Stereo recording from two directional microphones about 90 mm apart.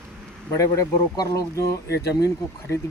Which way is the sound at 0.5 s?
40° left (ahead or behind).